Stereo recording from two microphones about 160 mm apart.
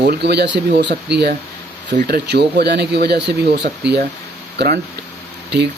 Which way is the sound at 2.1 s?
85° right.